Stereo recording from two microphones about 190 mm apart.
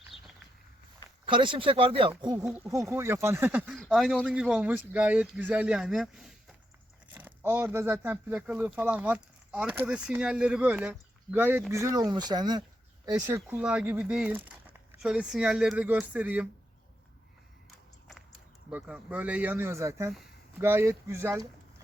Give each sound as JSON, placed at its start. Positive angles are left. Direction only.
{"t": 0.1, "sound": "a sound", "side_deg": 30}
{"t": 1.2, "sound": "speech", "side_deg": -25}
{"t": 18.7, "sound": "speech", "side_deg": -10}